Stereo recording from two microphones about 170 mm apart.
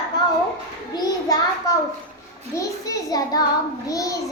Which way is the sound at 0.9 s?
20° left (ahead or behind).